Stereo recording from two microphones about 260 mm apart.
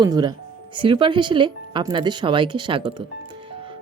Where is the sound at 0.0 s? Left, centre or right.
Centre.